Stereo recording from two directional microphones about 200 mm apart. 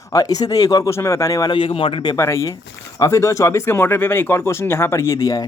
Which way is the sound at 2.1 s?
15° left (ahead or behind).